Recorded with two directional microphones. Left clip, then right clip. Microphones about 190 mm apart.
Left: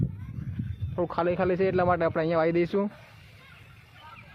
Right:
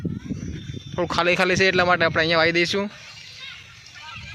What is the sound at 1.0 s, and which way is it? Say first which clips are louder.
Speech: right 6 dB; 15° right (ahead or behind).